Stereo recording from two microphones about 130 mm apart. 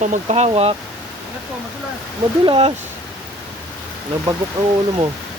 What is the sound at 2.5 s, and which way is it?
Speech, 45° right (ahead or behind).